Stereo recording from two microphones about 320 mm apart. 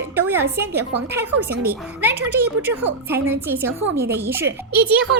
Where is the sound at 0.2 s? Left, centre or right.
Centre.